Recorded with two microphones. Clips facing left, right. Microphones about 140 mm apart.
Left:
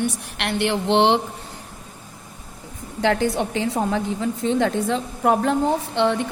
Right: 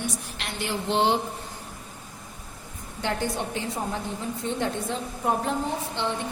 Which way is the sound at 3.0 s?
90° left.